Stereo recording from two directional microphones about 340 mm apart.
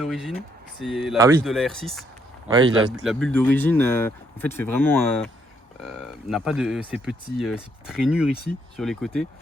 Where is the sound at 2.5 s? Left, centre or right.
Centre.